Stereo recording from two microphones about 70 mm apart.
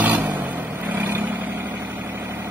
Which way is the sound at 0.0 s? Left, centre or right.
Right.